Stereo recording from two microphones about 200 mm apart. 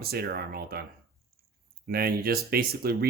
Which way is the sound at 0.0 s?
50° right (ahead or behind).